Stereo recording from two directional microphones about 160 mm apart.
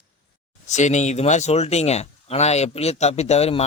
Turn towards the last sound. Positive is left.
turn(degrees=40)  # may be behind; listen again after turning